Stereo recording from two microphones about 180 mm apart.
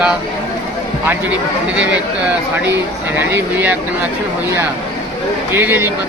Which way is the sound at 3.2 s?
10° right (ahead or behind).